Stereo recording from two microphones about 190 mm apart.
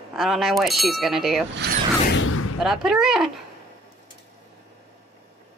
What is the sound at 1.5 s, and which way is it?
Mechanisms, 55° right (ahead or behind).